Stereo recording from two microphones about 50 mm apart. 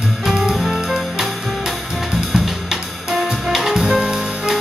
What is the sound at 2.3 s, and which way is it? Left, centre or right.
Drum kit, centre.